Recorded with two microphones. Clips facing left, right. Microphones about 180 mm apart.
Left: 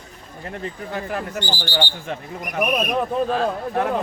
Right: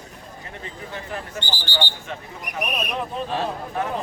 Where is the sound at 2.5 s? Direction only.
55° left (ahead or behind).